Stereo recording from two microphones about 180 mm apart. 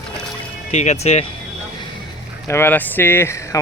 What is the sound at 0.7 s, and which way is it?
Speech, 40° left (ahead or behind).